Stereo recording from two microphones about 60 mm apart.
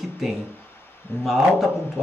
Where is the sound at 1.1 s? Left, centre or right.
Left.